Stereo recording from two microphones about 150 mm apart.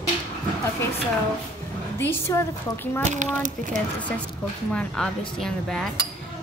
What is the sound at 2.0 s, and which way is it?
Speech, 15° left (ahead or behind).